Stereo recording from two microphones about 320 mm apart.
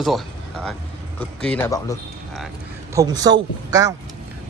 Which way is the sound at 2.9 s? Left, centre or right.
Centre.